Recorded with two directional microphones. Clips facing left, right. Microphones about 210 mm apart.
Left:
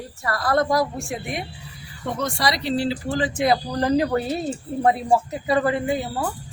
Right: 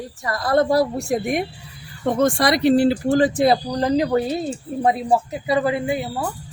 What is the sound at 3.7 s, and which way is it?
Speech, 15° right (ahead or behind).